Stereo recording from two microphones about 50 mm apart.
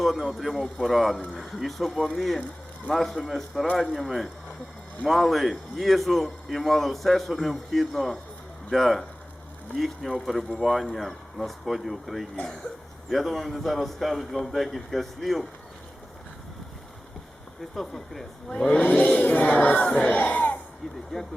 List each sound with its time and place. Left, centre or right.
0.0 s a man's voice: centre
17.7 s a man's voice: centre
18.7 s speech: left
19.0 s choir: left
20.1 s speech: left